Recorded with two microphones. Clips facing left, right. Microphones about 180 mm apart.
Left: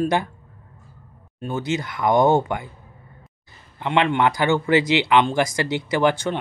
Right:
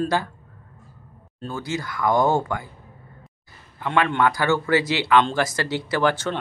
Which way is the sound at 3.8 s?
20° left (ahead or behind).